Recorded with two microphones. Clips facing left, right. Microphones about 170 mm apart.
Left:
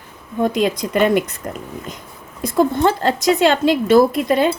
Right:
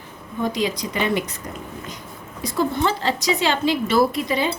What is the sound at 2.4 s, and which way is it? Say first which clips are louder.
A woman's voice: left 6 dB; 50° left (ahead or behind).